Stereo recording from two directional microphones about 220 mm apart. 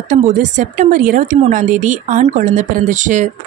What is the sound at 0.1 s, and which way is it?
Speech, 35° right (ahead or behind).